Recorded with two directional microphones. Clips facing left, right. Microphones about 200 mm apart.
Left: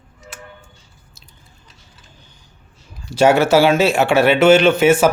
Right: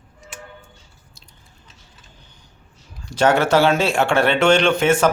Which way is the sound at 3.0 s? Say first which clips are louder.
Left 4 dB; 10° left (ahead or behind).